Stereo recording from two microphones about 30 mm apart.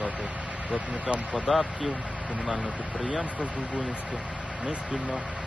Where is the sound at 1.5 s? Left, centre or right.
Centre.